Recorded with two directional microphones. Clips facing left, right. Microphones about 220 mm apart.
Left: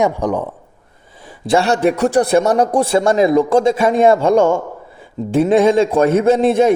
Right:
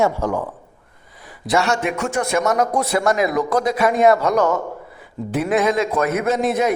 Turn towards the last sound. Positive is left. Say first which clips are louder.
# left 7 dB
turn(degrees=30)  # may be behind; listen again after turning